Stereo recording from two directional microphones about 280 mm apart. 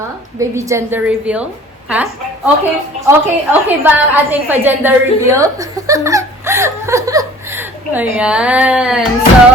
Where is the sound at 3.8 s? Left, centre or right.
Centre.